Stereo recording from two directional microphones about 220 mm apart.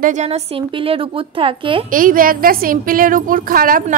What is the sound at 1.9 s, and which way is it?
A woman's voice, 40° right (ahead or behind).